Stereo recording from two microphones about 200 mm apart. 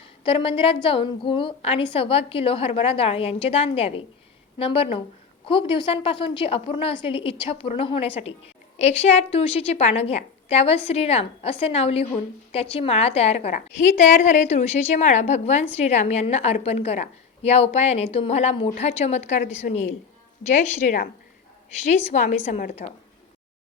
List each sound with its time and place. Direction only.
0.3 s a woman's voice: 25° left (ahead or behind)
20.5 s a woman's voice: 40° left (ahead or behind)
22.1 s a woman's voice: 35° left (ahead or behind)